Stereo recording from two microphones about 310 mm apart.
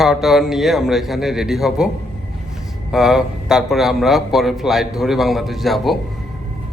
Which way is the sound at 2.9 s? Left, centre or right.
Centre.